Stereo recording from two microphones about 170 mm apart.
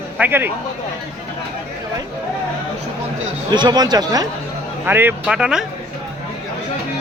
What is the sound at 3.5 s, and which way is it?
Speech, 25° right (ahead or behind).